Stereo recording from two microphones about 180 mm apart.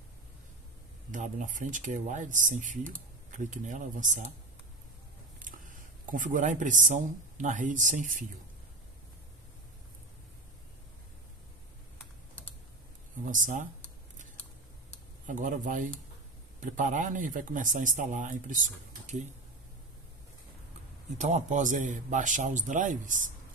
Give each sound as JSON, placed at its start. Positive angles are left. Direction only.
{"t": 1.1, "sound": "speech", "side_deg": -45}
{"t": 5.4, "sound": "speech", "side_deg": -50}
{"t": 13.2, "sound": "speech", "side_deg": -45}
{"t": 15.2, "sound": "speech", "side_deg": -45}
{"t": 21.2, "sound": "speech", "side_deg": -40}